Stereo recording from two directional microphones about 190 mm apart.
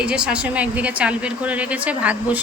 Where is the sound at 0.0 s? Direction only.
5° right (ahead or behind).